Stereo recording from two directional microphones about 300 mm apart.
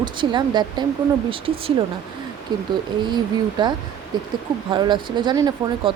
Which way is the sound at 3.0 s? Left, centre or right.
Centre.